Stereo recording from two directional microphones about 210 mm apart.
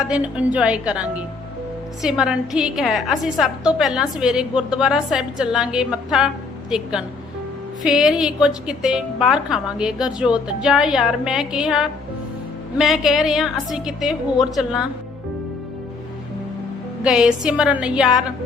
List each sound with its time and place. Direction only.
0.0 s a woman's voice: 5° right (ahead or behind)
17.0 s a woman's voice: 5° right (ahead or behind)